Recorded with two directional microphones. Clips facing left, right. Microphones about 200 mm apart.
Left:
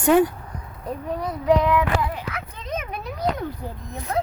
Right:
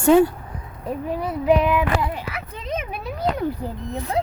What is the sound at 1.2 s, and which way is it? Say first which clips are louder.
Child singing: right 1 dB; 5° right (ahead or behind).